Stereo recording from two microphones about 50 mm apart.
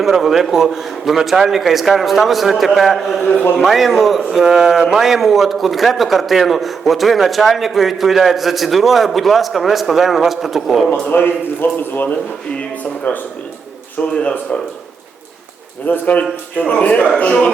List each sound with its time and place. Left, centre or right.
0.0 s a man's voice: centre
11.0 s a man's voice: left
13.1 s speech: left
15.9 s a man's voice: left